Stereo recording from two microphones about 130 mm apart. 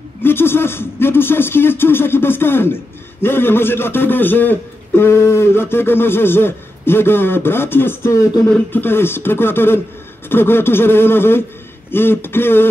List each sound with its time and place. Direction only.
0.2 s speech: 15° left (ahead or behind)